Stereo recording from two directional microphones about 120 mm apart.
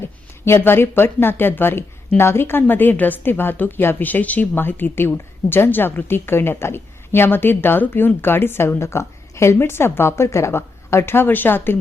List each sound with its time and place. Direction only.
0.4 s speech: 20° left (ahead or behind)